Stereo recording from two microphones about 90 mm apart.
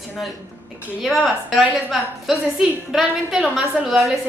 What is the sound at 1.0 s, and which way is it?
A woman's voice, centre (ahead or behind).